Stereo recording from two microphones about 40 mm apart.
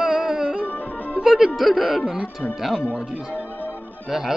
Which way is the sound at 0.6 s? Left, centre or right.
Left.